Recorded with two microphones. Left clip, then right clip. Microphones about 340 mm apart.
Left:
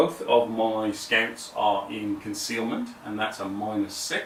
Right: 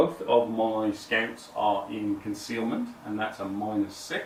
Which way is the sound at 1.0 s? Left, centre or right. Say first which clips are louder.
Left 6 dB; centre.